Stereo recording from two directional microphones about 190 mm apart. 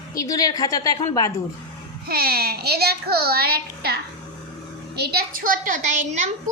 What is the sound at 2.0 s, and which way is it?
A child's voice, 50° right (ahead or behind).